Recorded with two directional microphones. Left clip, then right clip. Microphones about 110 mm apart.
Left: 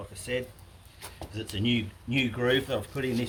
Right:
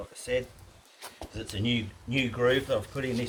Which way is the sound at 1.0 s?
5° left (ahead or behind).